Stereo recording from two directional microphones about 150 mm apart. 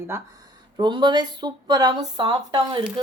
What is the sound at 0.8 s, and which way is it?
Speech, 30° right (ahead or behind).